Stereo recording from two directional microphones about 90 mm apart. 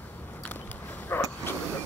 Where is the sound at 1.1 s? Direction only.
25° left (ahead or behind).